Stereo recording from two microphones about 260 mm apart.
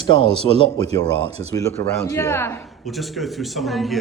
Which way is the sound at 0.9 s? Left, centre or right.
Right.